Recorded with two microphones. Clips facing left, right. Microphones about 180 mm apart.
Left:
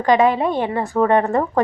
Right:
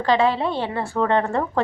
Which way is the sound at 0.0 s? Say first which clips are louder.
Left 4 dB; 15° left (ahead or behind).